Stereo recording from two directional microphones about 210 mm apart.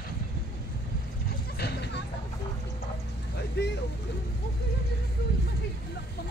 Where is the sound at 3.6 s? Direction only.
55° left (ahead or behind).